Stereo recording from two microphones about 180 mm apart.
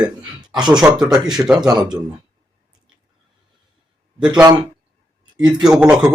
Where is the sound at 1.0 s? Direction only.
25° right (ahead or behind).